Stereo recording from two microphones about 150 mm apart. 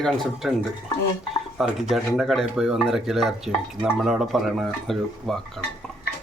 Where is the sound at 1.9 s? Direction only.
Centre (ahead or behind).